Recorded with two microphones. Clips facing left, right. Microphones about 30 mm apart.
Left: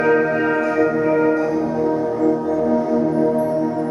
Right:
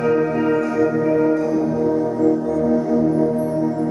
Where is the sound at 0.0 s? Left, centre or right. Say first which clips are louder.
Left 2 dB; left.